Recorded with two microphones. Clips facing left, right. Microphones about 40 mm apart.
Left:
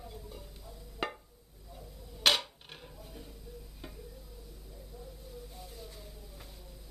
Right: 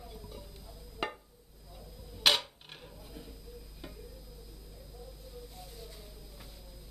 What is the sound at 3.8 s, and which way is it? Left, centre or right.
Tick-tock, centre.